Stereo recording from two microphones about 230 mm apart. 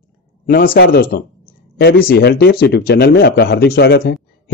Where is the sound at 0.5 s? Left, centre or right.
Left.